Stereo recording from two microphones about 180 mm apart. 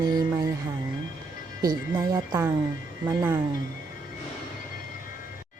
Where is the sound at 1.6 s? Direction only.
25° right (ahead or behind).